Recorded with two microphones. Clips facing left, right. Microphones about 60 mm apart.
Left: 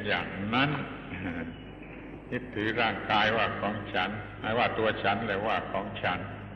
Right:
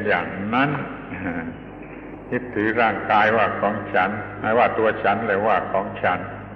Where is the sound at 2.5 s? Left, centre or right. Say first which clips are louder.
Right 9 dB; right.